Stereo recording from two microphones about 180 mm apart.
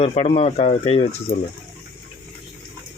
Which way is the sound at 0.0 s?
35° left (ahead or behind).